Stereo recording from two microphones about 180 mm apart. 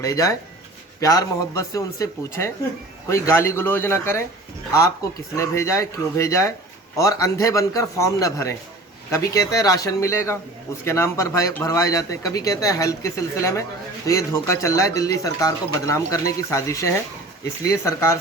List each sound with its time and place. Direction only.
0.0 s speech: 20° left (ahead or behind)
5.4 s speech: 15° left (ahead or behind)